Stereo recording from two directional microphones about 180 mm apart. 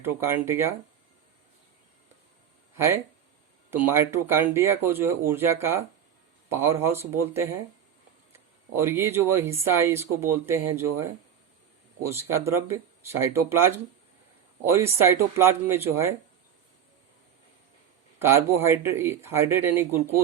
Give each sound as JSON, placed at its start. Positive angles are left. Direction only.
{"t": 0.0, "sound": "speech", "side_deg": -15}
{"t": 2.7, "sound": "speech", "side_deg": -15}
{"t": 8.7, "sound": "speech", "side_deg": -15}
{"t": 18.2, "sound": "speech", "side_deg": -15}